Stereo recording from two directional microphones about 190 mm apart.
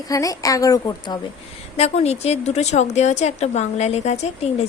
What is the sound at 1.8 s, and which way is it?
A woman's voice, 35° left (ahead or behind).